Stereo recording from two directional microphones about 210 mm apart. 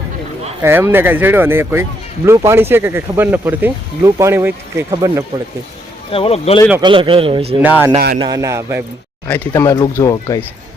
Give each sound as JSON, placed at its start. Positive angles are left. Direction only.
{"t": 0.6, "sound": "speech", "side_deg": -10}
{"t": 6.1, "sound": "speech", "side_deg": 25}
{"t": 6.8, "sound": "a man's voice", "side_deg": -25}
{"t": 7.6, "sound": "speech", "side_deg": -10}
{"t": 7.9, "sound": "speech", "side_deg": -45}
{"t": 8.2, "sound": "speech", "side_deg": -15}
{"t": 9.2, "sound": "speech", "side_deg": 10}